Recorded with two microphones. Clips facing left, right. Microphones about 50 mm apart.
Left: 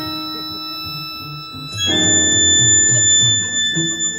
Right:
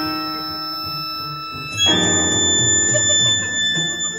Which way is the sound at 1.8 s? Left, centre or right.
Right.